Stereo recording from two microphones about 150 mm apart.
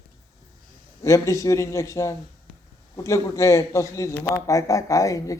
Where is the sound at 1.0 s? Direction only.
20° left (ahead or behind).